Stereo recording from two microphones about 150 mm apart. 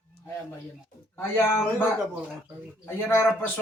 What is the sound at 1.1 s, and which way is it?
Speech, 15° left (ahead or behind).